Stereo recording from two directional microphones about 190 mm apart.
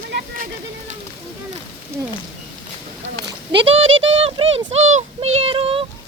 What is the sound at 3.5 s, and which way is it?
Speech, 30° right (ahead or behind).